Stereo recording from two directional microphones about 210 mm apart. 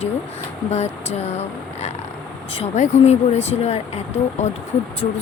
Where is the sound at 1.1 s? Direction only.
30° left (ahead or behind).